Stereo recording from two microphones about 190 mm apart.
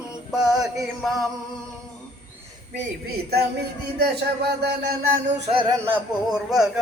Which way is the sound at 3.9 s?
60° right (ahead or behind).